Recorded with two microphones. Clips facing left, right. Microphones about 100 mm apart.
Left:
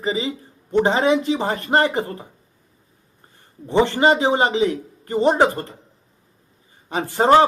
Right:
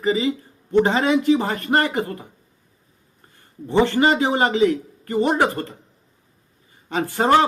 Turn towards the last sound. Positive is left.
turn(degrees=20)  # may be behind; listen again after turning